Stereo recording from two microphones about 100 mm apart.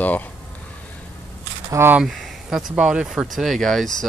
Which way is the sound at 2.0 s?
Centre (ahead or behind).